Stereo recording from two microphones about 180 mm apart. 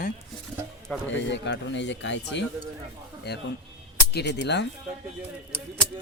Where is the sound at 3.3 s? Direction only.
65° left (ahead or behind).